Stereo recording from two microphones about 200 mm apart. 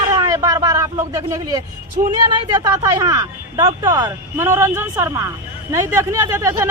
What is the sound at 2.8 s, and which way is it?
Speech, 15° right (ahead or behind).